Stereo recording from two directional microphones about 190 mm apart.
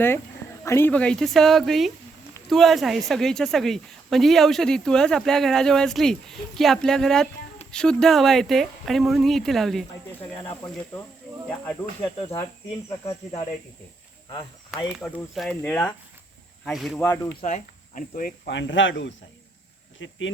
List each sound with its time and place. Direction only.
0.6 s speech: 15° left (ahead or behind)
10.3 s speech: 15° left (ahead or behind)
12.0 s speech: 30° left (ahead or behind)
14.8 s speech: centre (ahead or behind)
17.0 s speech: 15° left (ahead or behind)
17.4 s speech: 40° left (ahead or behind)
18.5 s speech: 75° left (ahead or behind)